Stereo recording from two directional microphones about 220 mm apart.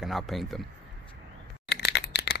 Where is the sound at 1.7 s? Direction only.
50° left (ahead or behind).